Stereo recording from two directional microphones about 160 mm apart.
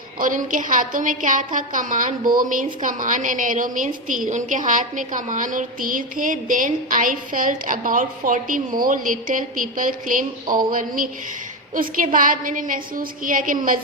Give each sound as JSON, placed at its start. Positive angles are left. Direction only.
{"t": 0.2, "sound": "a woman's voice", "side_deg": -55}